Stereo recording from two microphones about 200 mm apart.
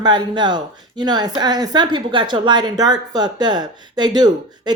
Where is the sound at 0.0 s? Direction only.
20° right (ahead or behind).